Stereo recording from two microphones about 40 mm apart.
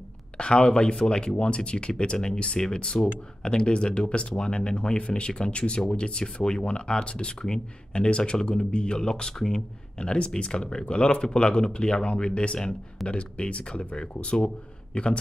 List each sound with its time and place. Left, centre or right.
0.4 s speech: left
9.9 s speech: left
14.9 s speech: left